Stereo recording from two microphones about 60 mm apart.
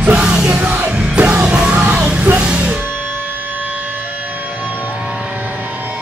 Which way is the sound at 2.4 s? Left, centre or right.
Centre.